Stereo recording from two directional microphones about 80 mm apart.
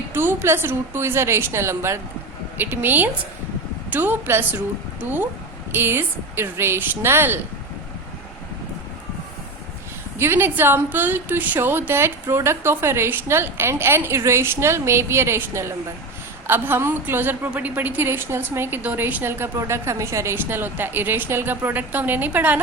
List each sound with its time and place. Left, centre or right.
0.1 s a woman's voice: right
10.2 s a woman's voice: right